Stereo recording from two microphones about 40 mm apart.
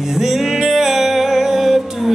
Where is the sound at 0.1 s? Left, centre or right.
Centre.